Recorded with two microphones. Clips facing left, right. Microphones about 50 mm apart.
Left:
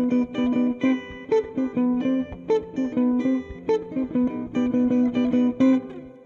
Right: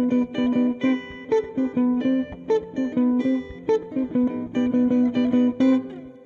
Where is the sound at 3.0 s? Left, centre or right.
Left.